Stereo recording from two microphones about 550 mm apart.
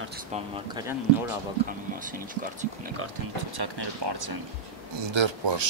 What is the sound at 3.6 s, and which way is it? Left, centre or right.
Speech, right.